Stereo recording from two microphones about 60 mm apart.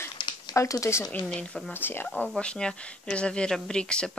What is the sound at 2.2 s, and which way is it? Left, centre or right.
Speech, centre.